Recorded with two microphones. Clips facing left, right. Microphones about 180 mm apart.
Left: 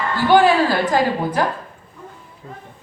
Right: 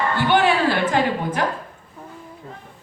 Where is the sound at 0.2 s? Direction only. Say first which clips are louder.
Left 5 dB; 35° left (ahead or behind).